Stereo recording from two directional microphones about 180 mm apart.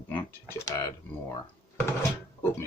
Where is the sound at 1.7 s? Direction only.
15° left (ahead or behind).